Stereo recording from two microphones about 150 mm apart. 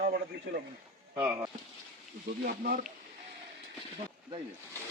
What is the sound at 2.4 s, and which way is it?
Speech, 70° right (ahead or behind).